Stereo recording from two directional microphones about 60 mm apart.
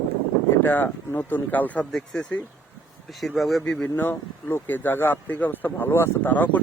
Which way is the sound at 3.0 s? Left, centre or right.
Centre.